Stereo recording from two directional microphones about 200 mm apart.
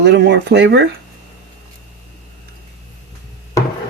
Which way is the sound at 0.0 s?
60° right (ahead or behind).